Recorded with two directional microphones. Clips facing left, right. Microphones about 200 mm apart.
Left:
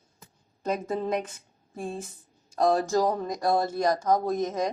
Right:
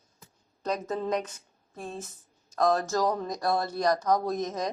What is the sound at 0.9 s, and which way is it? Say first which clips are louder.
Speech: left 1 dB; 10° left (ahead or behind).